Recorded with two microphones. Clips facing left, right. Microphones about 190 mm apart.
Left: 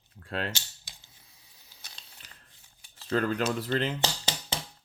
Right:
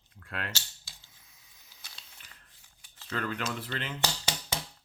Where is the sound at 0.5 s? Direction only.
20° left (ahead or behind).